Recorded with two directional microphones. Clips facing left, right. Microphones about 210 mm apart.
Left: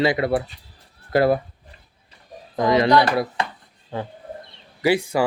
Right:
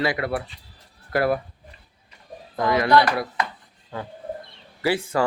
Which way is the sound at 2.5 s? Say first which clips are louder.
Left 2 dB; 20° left (ahead or behind).